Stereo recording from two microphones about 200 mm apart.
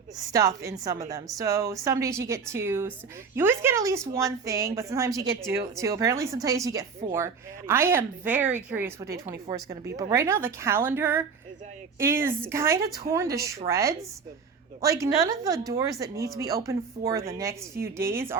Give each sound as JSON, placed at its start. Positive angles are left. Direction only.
{"t": 0.3, "sound": "a woman's voice", "side_deg": -15}